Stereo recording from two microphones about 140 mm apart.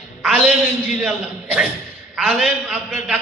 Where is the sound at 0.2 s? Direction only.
10° right (ahead or behind).